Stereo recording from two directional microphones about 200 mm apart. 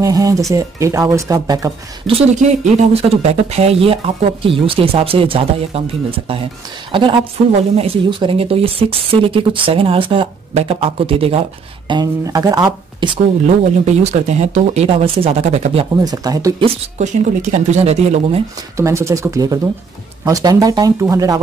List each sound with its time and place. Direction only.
0.0 s speech: 15° right (ahead or behind)
2.6 s speech: 30° right (ahead or behind)
13.8 s speech: 35° right (ahead or behind)
17.0 s speech: 35° right (ahead or behind)
18.8 s speech: 15° right (ahead or behind)